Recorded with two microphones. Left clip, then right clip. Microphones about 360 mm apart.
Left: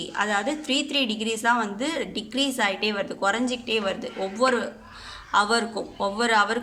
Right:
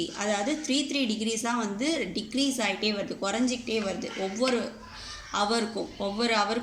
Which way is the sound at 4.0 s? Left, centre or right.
Left.